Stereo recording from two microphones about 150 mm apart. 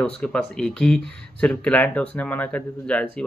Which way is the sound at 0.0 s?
5° left (ahead or behind).